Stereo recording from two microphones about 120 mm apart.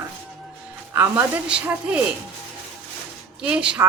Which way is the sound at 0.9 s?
15° right (ahead or behind).